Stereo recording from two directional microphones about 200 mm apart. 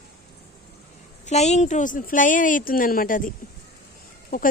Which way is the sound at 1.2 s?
35° left (ahead or behind).